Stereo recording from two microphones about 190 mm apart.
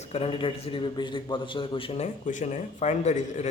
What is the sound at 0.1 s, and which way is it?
A man's voice, 30° left (ahead or behind).